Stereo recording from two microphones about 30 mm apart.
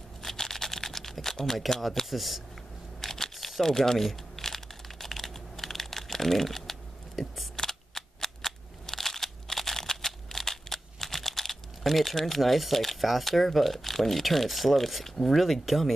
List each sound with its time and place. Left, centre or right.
0.2 s typing: centre
2.0 s speech: centre
3.0 s a sound: centre
3.3 s speech: centre
4.4 s crumpling: centre
7.2 s scissors: centre
7.5 s cap gun: centre
15.0 s speech: centre